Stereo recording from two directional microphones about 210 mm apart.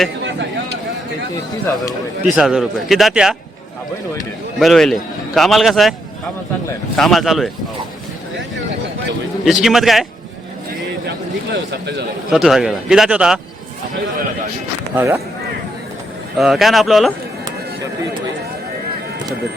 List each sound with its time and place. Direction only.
0.3 s a sound: 60° right (ahead or behind)
1.6 s speech: 15° left (ahead or behind)
2.2 s a man's voice: 5° right (ahead or behind)
4.6 s a man's voice: centre (ahead or behind)
6.9 s a man's voice: centre (ahead or behind)
9.4 s a man's voice: centre (ahead or behind)
11.5 s speech: 55° right (ahead or behind)
12.3 s a man's voice: centre (ahead or behind)
14.9 s speech: 10° right (ahead or behind)
16.4 s a man's voice: centre (ahead or behind)